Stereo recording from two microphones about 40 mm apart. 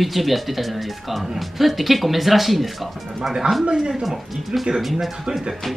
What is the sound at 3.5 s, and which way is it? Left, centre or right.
Speech, centre.